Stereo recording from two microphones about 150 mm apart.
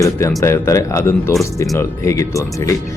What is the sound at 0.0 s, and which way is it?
Speech, 20° left (ahead or behind).